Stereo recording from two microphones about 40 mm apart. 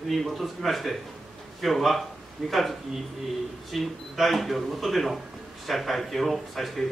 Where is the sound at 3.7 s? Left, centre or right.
Centre.